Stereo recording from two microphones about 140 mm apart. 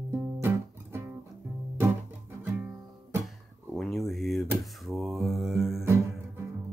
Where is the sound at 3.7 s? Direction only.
Centre (ahead or behind).